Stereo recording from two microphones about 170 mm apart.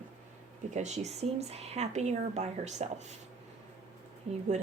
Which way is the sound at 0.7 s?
40° right (ahead or behind).